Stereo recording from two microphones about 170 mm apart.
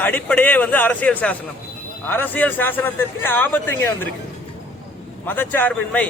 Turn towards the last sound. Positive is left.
turn(degrees=10)  # may be behind; listen again after turning